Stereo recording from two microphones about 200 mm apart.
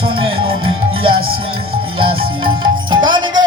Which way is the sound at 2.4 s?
25° right (ahead or behind).